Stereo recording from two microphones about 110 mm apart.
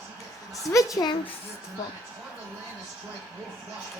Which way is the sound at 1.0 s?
45° left (ahead or behind).